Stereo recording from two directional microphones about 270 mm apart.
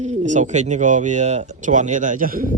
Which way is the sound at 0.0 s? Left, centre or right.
Right.